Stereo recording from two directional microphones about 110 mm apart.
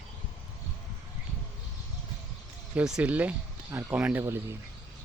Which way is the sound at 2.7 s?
10° right (ahead or behind).